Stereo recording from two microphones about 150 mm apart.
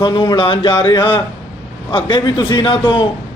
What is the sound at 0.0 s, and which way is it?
A man's voice, 30° left (ahead or behind).